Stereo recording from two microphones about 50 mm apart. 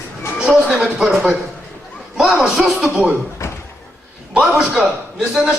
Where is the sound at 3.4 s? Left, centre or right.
Left.